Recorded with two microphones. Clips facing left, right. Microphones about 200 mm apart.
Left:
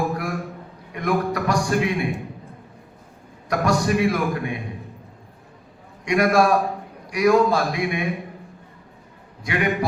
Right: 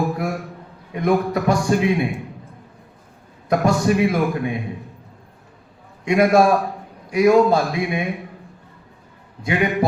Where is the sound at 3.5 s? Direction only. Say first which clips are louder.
Right 3 dB; 25° right (ahead or behind).